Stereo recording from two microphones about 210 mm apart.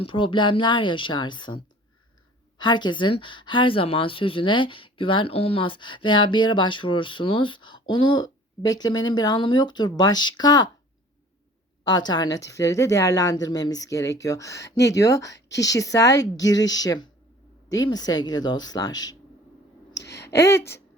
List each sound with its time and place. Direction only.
0.0 s a woman's voice: 25° left (ahead or behind)
11.9 s a woman's voice: 20° left (ahead or behind)
15.3 s a woman's voice: 55° left (ahead or behind)
15.5 s a woman's voice: 15° left (ahead or behind)
20.0 s a sound: 50° left (ahead or behind)
20.3 s a woman's voice: 15° left (ahead or behind)